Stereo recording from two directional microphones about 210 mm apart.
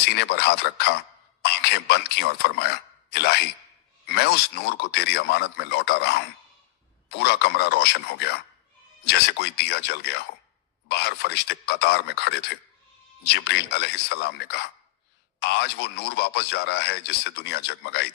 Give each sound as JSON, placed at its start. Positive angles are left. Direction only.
{"t": 0.0, "sound": "a man's voice", "side_deg": 50}
{"t": 1.6, "sound": "a sound", "side_deg": 50}
{"t": 4.0, "sound": "a man's voice", "side_deg": 50}